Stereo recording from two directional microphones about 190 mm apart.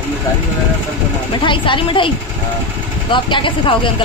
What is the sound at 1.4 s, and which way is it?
Speech, 25° left (ahead or behind).